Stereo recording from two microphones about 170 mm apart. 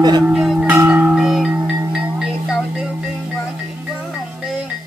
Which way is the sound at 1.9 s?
5° right (ahead or behind).